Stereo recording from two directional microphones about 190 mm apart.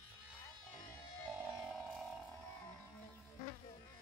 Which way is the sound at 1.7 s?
Centre (ahead or behind).